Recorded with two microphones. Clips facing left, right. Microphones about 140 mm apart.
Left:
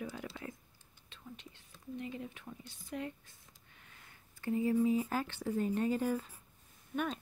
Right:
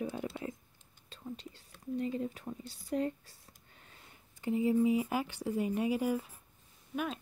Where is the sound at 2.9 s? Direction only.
35° right (ahead or behind).